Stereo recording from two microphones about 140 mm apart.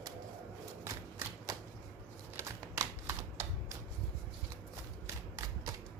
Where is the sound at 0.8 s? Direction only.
20° right (ahead or behind).